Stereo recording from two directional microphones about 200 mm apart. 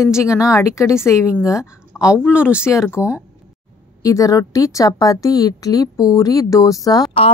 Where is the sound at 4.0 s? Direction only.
15° left (ahead or behind).